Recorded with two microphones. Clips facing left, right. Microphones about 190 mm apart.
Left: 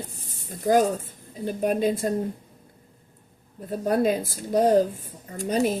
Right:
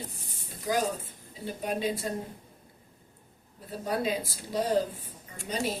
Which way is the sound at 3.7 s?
50° left (ahead or behind).